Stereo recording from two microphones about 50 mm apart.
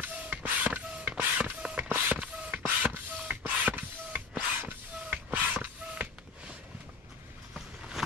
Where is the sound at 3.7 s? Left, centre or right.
Right.